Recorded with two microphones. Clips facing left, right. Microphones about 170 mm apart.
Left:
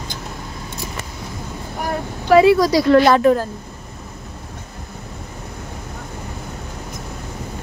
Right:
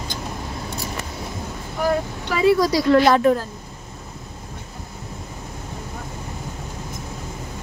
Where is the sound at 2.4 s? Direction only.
75° left (ahead or behind).